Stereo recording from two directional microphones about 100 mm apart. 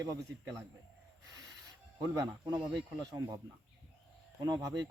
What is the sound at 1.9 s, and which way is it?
Speech, 45° right (ahead or behind).